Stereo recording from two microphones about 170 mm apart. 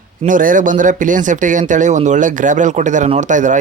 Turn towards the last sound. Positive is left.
turn(degrees=-45)  # may be behind; listen again after turning